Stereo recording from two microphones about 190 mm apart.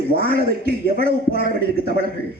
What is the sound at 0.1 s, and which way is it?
Speech, 50° right (ahead or behind).